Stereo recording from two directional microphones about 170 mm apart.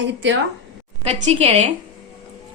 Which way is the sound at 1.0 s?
35° right (ahead or behind).